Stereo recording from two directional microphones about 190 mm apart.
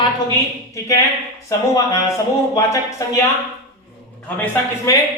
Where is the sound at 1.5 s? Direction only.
15° left (ahead or behind).